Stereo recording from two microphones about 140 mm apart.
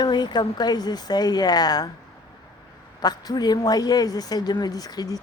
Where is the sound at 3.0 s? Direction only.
30° left (ahead or behind).